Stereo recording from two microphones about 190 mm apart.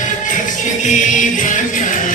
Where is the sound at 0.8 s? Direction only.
40° left (ahead or behind).